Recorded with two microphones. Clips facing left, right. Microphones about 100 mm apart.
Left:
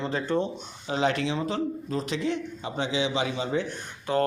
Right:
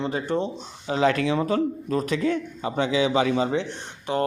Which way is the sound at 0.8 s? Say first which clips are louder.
Right 4 dB; 40° right (ahead or behind).